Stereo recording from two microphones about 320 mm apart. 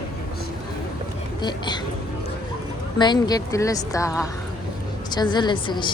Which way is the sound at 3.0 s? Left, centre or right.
Centre.